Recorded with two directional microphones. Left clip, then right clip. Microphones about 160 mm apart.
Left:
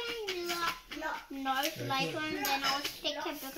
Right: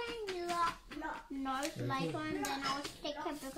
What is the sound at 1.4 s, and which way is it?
Speech, 20° right (ahead or behind).